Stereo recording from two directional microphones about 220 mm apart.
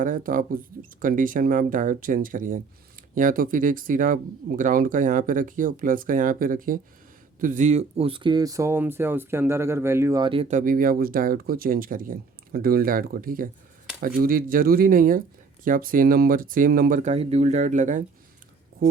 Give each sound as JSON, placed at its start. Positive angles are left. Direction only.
{"t": 0.0, "sound": "speech", "side_deg": -40}
{"t": 10.5, "sound": "speech", "side_deg": -35}